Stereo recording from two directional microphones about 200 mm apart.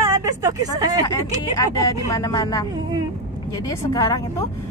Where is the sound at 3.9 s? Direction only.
15° left (ahead or behind).